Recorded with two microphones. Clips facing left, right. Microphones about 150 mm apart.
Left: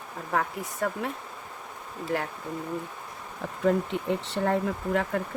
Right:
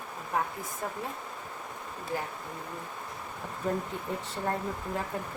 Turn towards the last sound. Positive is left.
turn(degrees=90)